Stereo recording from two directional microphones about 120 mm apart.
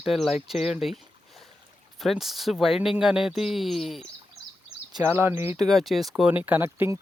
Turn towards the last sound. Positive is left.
turn(degrees=-20)  # may be behind; listen again after turning